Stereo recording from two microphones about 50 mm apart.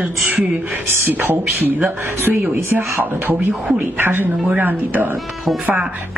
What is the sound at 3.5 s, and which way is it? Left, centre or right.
Speech, right.